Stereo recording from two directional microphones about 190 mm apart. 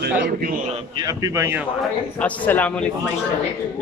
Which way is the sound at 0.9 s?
20° right (ahead or behind).